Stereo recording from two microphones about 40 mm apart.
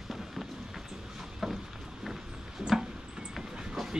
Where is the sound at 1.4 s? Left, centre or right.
Centre.